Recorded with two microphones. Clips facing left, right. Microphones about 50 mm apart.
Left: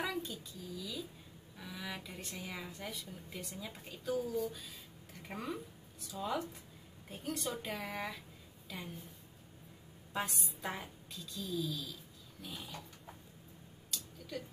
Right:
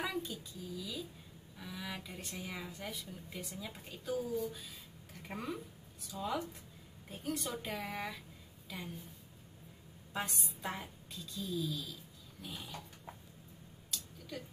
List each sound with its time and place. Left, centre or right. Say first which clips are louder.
0.0 s a child's voice: even; centre
10.1 s a woman's voice: left 1 dB; centre
13.9 s a sound: left 1 dB; centre